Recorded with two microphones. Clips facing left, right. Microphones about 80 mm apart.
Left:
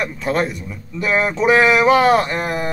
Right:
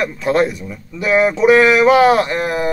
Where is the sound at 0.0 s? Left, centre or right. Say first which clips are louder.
Right 4 dB; centre.